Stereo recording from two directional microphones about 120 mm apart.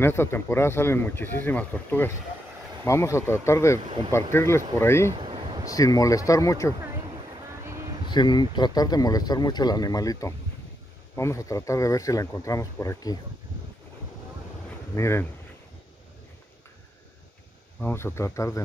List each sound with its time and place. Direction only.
0.0 s speech: 20° left (ahead or behind)
5.1 s a sound: 45° right (ahead or behind)
5.7 s speech: 30° left (ahead or behind)
8.1 s speech: 40° left (ahead or behind)
15.0 s speech: 20° left (ahead or behind)
17.7 s speech: 20° left (ahead or behind)